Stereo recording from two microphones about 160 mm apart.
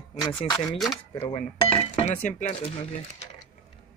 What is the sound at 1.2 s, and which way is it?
Speech, 35° left (ahead or behind).